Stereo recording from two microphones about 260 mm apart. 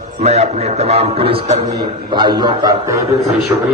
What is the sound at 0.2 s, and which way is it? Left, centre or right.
A man's voice, right.